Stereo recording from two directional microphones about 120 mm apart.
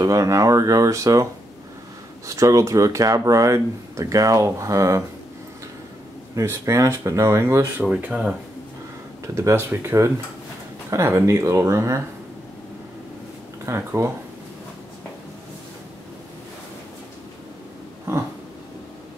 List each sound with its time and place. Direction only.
0.0 s speech: 25° right (ahead or behind)
2.2 s speech: 25° right (ahead or behind)
6.3 s speech: 25° right (ahead or behind)
7.8 s speech: 10° right (ahead or behind)
9.3 s speech: 25° right (ahead or behind)
13.7 s speech: 20° right (ahead or behind)